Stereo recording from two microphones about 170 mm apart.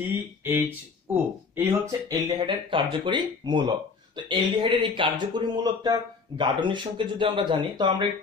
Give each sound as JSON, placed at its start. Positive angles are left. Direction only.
{"t": 0.5, "sound": "speech", "side_deg": -15}